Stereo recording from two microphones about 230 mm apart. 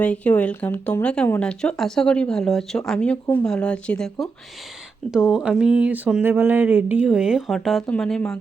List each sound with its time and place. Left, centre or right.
0.0 s speech: centre